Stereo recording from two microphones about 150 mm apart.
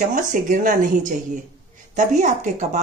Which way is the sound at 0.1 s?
60° right (ahead or behind).